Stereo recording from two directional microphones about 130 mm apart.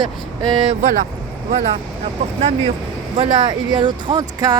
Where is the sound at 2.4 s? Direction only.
60° right (ahead or behind).